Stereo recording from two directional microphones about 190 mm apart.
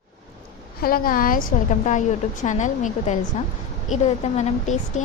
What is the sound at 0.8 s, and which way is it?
A woman's voice, 50° left (ahead or behind).